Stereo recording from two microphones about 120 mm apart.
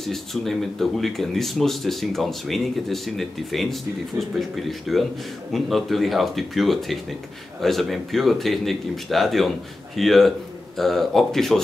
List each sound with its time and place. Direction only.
0.0 s speech: centre (ahead or behind)